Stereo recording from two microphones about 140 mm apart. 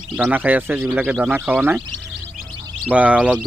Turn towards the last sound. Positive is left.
turn(degrees=-10)  # may be behind; listen again after turning